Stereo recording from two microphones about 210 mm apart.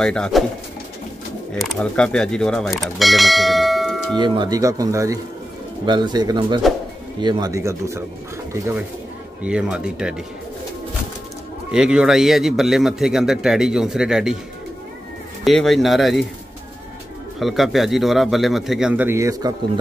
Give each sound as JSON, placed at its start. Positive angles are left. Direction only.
{"t": 0.0, "sound": "speech", "side_deg": 5}
{"t": 1.5, "sound": "speech", "side_deg": 0}
{"t": 4.2, "sound": "speech", "side_deg": -20}
{"t": 9.4, "sound": "speech", "side_deg": -5}
{"t": 11.7, "sound": "speech", "side_deg": -5}
{"t": 15.4, "sound": "speech", "side_deg": 0}
{"t": 17.4, "sound": "speech", "side_deg": 0}